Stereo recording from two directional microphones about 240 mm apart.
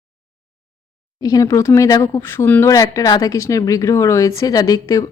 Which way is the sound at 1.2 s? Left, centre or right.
Centre.